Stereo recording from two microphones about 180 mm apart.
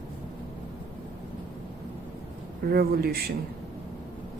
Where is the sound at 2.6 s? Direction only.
55° right (ahead or behind).